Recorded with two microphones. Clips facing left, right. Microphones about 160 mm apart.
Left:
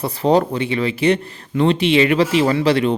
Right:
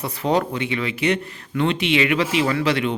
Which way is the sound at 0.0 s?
35° left (ahead or behind).